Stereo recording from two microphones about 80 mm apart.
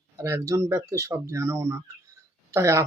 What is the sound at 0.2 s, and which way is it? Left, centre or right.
Speech, right.